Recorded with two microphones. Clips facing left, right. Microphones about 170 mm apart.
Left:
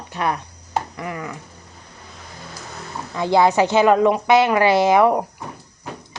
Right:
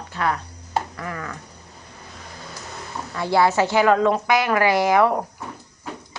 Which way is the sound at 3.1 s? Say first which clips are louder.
Left 3 dB; 20° left (ahead or behind).